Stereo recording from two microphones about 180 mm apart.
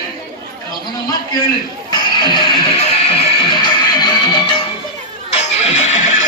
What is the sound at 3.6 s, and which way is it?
Music, 25° left (ahead or behind).